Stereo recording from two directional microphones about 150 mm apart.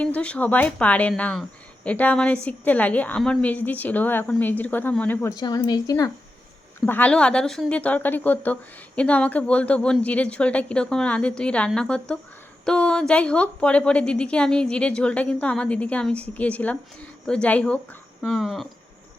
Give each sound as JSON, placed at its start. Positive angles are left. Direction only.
{"t": 0.0, "sound": "speech", "side_deg": 10}
{"t": 5.4, "sound": "a woman's voice", "side_deg": 30}
{"t": 6.8, "sound": "speech", "side_deg": 10}